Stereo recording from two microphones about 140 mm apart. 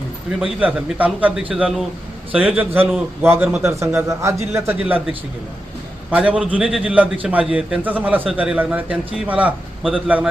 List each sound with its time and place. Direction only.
0.3 s a man's voice: 10° right (ahead or behind)
6.1 s a man's voice: 10° right (ahead or behind)